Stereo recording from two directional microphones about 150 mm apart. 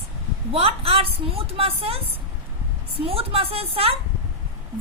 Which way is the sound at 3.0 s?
40° right (ahead or behind).